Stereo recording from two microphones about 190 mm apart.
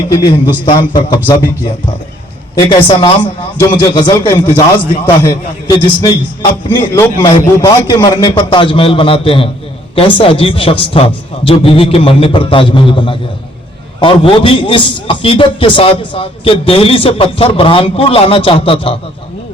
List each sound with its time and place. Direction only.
0.1 s a man's voice: 20° left (ahead or behind)
2.6 s a man's voice: 25° left (ahead or behind)